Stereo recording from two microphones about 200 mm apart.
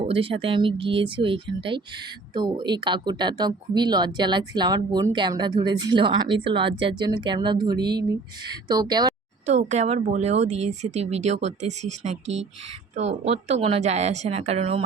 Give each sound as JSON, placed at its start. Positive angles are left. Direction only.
{"t": 0.0, "sound": "speech", "side_deg": -25}
{"t": 9.5, "sound": "speech", "side_deg": -35}
{"t": 13.0, "sound": "speech", "side_deg": -35}